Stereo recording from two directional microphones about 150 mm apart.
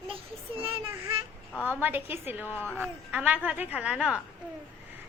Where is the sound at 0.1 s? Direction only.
35° right (ahead or behind).